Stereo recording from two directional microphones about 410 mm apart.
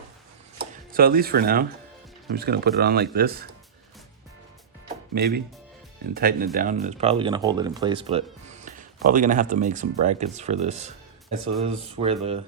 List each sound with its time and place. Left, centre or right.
0.6 s speech: right
5.1 s speech: right